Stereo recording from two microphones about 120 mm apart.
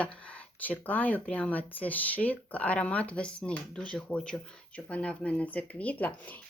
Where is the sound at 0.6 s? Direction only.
15° left (ahead or behind).